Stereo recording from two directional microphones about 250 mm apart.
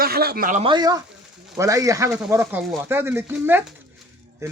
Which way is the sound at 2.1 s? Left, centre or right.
Centre.